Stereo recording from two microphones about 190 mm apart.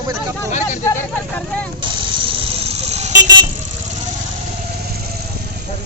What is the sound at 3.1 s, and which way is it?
Vehicle, 20° right (ahead or behind).